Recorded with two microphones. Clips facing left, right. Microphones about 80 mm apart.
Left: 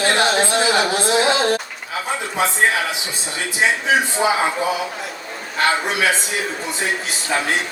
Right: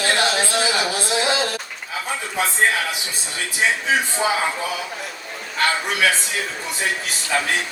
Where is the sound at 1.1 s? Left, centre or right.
Left.